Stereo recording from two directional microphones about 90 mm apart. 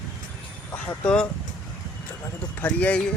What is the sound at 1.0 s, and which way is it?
Speech, 10° left (ahead or behind).